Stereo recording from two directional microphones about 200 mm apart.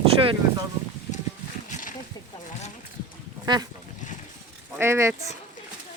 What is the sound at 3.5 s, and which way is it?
Speech, 25° right (ahead or behind).